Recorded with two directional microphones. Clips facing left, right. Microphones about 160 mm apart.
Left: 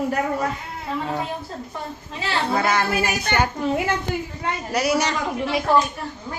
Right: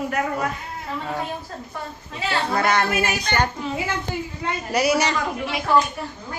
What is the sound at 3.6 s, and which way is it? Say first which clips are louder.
Speech: left 5 dB; 55° left (ahead or behind).